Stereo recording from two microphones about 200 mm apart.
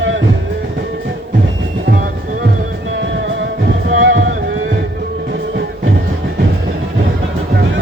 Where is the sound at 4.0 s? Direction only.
65° right (ahead or behind).